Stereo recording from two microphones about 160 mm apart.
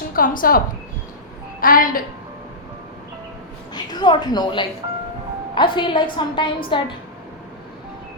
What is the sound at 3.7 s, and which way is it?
A woman's voice, 25° left (ahead or behind).